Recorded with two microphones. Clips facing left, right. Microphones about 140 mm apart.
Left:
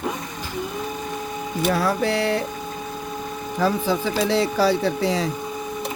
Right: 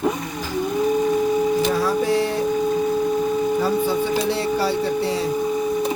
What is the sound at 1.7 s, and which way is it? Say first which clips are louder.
Music: right 2 dB; 65° left (ahead or behind).